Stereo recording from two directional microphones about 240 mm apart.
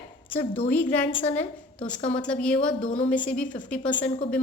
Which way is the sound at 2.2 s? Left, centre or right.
Centre.